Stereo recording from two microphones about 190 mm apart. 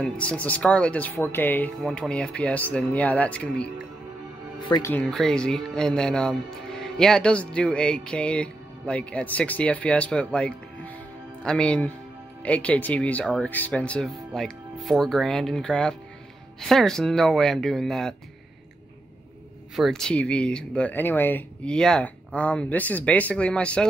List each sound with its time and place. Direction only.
0.0 s speech: 5° left (ahead or behind)
4.6 s speech: 20° left (ahead or behind)
4.9 s speech: 5° left (ahead or behind)
19.7 s speech: centre (ahead or behind)